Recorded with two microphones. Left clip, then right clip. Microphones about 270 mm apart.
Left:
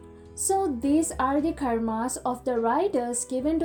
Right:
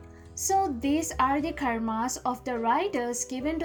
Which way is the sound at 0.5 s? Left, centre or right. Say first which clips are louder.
Left 1 dB; right.